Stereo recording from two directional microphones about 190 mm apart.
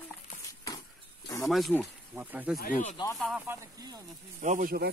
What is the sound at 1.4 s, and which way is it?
Speech, centre (ahead or behind).